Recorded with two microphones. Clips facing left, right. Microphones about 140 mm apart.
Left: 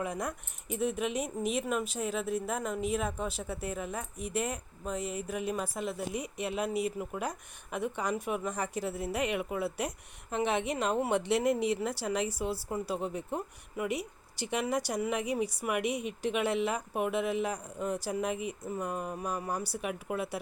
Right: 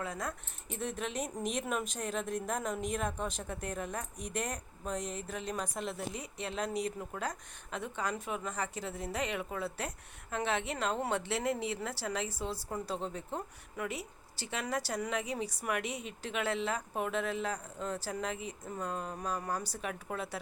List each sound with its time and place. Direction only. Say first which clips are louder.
0.0 s a woman's voice: left 4 dB; 15° left (ahead or behind)